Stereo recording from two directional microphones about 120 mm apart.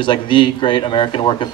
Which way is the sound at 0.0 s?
40° left (ahead or behind).